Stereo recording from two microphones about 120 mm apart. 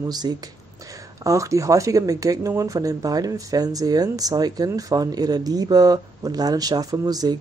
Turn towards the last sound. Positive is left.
turn(degrees=-35)  # may be behind; listen again after turning